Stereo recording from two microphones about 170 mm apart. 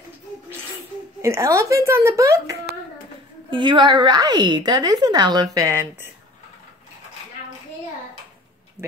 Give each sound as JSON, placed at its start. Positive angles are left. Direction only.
{"t": 1.2, "sound": "a woman's voice", "side_deg": -20}